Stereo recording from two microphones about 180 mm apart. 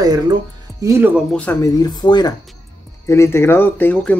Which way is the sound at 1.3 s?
10° left (ahead or behind).